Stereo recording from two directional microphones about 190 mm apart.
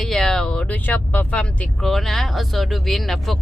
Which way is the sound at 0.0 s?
Centre (ahead or behind).